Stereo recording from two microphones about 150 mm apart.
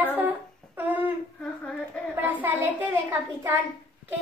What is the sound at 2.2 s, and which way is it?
A child's voice, 10° right (ahead or behind).